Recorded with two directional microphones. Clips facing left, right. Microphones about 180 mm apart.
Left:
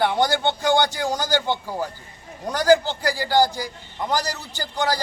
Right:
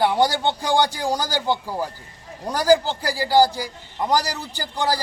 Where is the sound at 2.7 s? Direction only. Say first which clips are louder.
Even; 35° right (ahead or behind).